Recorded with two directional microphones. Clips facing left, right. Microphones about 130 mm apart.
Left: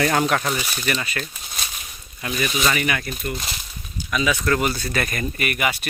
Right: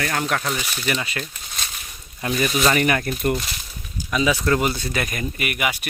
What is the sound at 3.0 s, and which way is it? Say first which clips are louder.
Speech: right 7 dB; 55° right (ahead or behind).